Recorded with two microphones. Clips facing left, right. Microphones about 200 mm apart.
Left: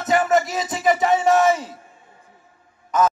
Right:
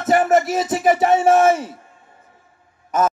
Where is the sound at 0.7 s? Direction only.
50° right (ahead or behind).